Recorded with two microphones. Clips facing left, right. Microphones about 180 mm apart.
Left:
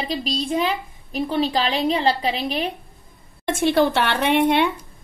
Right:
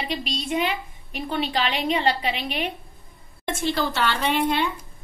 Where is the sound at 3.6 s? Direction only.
60° left (ahead or behind).